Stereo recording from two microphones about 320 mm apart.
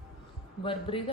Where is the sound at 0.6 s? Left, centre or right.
Centre.